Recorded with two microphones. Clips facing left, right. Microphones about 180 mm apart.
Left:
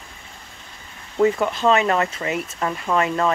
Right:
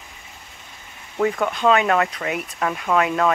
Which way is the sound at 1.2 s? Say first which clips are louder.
Left 2 dB; 5° left (ahead or behind).